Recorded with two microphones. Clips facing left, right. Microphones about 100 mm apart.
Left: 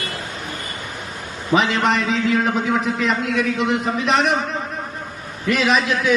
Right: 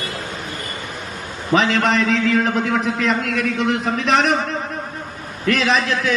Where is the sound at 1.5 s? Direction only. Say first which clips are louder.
Right 1 dB; centre (ahead or behind).